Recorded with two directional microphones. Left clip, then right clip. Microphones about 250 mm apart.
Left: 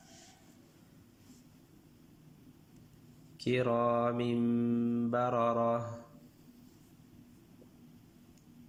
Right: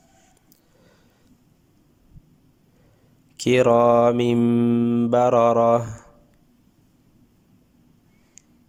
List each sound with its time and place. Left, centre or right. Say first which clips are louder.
3.3 s mantra: right 15 dB; right